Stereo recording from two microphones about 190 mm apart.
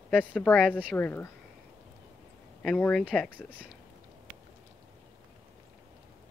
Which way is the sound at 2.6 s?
5° left (ahead or behind).